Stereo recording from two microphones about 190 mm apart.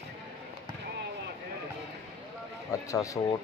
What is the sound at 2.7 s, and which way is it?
Speech, 15° left (ahead or behind).